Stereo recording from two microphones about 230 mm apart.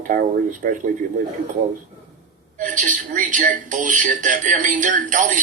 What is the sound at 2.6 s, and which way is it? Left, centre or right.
A man's voice, right.